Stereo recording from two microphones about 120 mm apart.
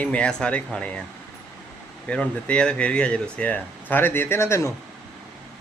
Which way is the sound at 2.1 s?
10° left (ahead or behind).